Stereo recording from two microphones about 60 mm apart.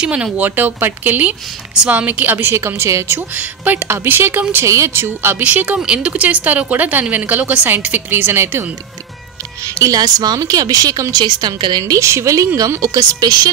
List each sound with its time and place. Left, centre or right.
0.0 s speech: centre
0.4 s speech: right
2.6 s speech: right
3.3 s speech: right
4.6 s speech: right
5.4 s speech: right
8.1 s speech: right
9.8 s a woman's voice: right
11.9 s a woman's voice: right
12.5 s speech: right